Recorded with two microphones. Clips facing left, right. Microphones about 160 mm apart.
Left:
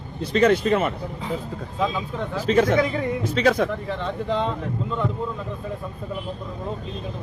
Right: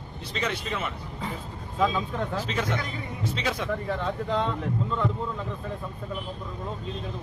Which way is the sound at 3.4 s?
45° left (ahead or behind).